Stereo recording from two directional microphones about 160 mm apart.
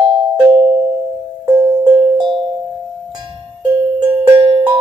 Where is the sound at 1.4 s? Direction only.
25° right (ahead or behind).